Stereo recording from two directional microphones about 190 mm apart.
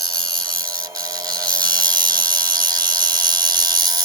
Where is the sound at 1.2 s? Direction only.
20° right (ahead or behind).